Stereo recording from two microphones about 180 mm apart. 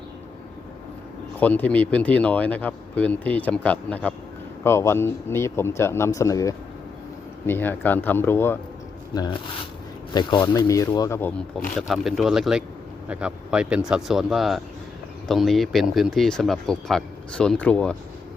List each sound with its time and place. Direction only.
1.4 s speech: 10° left (ahead or behind)